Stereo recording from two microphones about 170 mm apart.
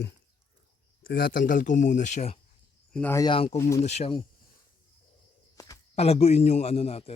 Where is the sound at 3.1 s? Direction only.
30° left (ahead or behind).